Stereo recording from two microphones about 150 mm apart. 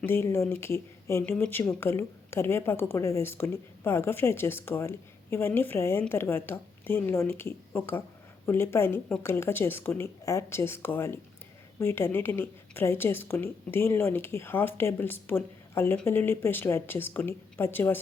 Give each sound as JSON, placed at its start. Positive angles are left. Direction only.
{"t": 0.0, "sound": "speech", "side_deg": 15}